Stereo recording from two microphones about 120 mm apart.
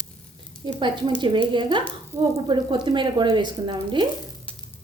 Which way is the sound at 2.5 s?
40° right (ahead or behind).